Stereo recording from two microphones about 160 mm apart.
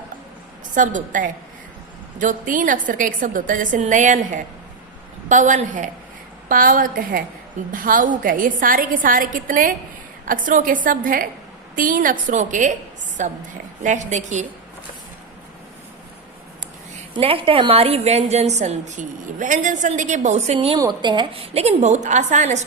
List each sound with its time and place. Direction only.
0.7 s a woman's voice: 55° right (ahead or behind)
17.2 s a woman's voice: 35° right (ahead or behind)
20.7 s a woman's voice: 25° right (ahead or behind); by 22.6 s 45° right (ahead or behind)